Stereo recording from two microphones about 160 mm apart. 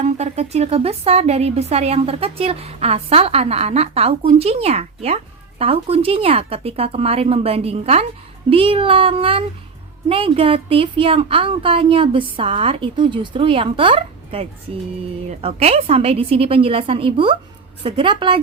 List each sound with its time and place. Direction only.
0.0 s a woman's voice: 45° right (ahead or behind)